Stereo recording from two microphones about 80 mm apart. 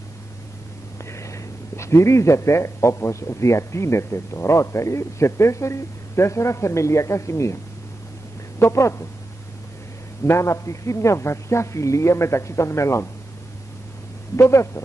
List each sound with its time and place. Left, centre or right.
1.1 s a man's voice: left
8.5 s a man's voice: left
10.2 s a man's voice: left
14.3 s a man's voice: left